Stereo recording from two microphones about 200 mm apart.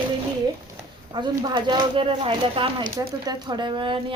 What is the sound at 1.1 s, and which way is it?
Speech, 20° right (ahead or behind).